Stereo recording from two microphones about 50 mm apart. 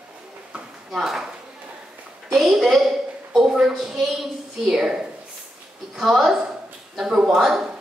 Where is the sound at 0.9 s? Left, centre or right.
Centre.